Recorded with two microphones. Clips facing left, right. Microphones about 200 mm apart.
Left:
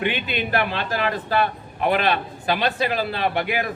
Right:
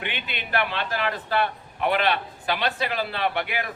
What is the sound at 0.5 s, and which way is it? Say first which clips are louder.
A man's voice: left 1 dB; 40° left (ahead or behind).